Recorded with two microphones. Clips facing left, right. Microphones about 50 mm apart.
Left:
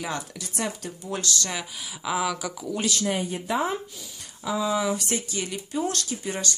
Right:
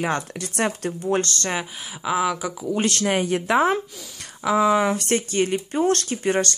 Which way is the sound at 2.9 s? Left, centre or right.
Right.